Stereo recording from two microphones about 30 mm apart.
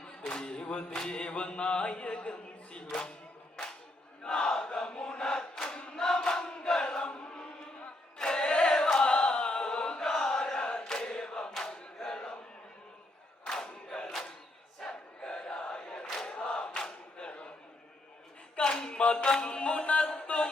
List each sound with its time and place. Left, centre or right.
0.0 s a capella: left
0.3 s music: left
4.2 s chant: left
8.3 s choir: left
10.0 s chant: centre
11.5 s battle cry: left
12.0 s a sound: left
13.5 s battle cry: centre
14.8 s choir: centre
15.4 s crowd: left
17.2 s a sound: left
18.6 s a sound: left
18.9 s music: left
20.1 s chant: left